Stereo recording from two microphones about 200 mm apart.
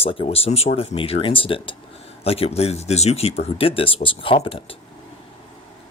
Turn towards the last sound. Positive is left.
turn(degrees=25)  # may be behind; listen again after turning